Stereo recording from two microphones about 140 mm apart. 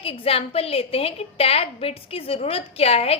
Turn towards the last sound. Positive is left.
turn(degrees=45)  # may be behind; listen again after turning